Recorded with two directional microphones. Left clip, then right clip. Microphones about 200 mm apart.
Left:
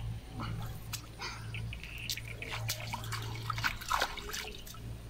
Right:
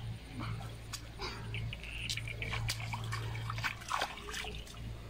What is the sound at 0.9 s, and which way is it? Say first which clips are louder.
Dog: left 1 dB; 5° left (ahead or behind).